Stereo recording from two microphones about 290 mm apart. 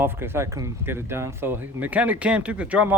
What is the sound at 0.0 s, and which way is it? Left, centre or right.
Speech, centre.